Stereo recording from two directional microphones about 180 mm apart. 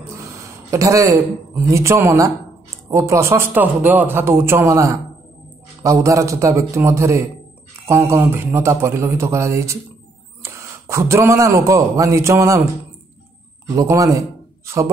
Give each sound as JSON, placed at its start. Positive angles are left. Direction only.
{"t": 0.7, "sound": "a man's voice", "side_deg": -15}
{"t": 13.7, "sound": "a man's voice", "side_deg": -20}